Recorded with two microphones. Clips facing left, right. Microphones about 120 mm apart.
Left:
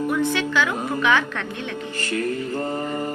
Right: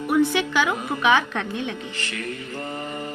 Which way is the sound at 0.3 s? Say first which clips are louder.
Even; 15° right (ahead or behind).